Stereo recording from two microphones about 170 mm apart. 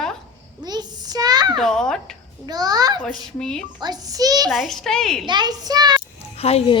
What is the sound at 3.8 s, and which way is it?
Speech, 25° right (ahead or behind).